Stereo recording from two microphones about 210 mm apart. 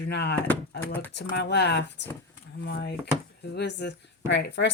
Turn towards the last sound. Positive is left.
turn(degrees=55)  # may be behind; listen again after turning